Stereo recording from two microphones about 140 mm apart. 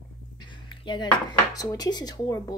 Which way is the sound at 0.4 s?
35° left (ahead or behind).